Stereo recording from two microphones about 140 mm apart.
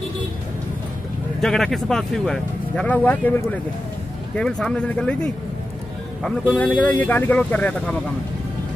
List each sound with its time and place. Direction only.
1.4 s speech: centre (ahead or behind)